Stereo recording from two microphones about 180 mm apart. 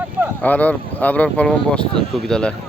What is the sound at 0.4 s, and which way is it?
Speech, 10° left (ahead or behind).